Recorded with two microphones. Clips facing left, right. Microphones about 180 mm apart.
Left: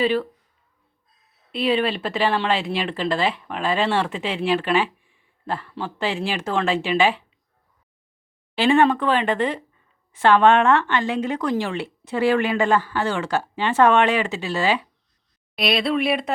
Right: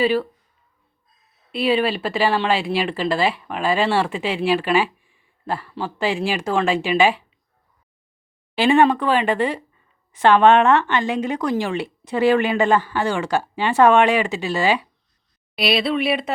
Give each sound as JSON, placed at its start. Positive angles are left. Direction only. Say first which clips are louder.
{"t": 0.0, "sound": "speech", "louder": "right 2 dB", "side_deg": -10}
{"t": 1.5, "sound": "speech", "louder": "right 2 dB", "side_deg": -5}
{"t": 8.5, "sound": "speech", "louder": "right 2 dB", "side_deg": -15}
{"t": 15.5, "sound": "speech", "louder": "right 1 dB", "side_deg": -5}